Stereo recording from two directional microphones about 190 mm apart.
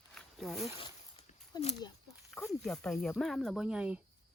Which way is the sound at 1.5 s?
20° left (ahead or behind).